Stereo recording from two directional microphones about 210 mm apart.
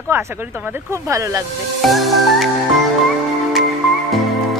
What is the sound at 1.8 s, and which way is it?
Music, centre (ahead or behind).